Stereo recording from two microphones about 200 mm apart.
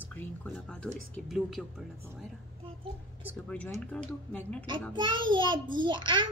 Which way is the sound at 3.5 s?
5° left (ahead or behind).